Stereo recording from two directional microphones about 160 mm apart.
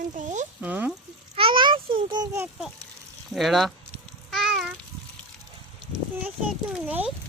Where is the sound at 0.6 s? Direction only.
10° right (ahead or behind).